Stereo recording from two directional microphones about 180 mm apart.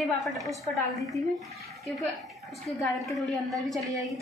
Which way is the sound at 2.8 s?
Centre (ahead or behind).